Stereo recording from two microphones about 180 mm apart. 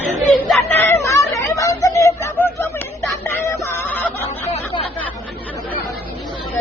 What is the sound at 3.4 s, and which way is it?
Music, 15° left (ahead or behind).